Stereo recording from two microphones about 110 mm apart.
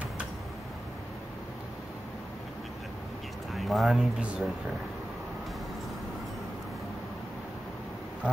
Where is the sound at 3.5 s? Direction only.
Centre (ahead or behind).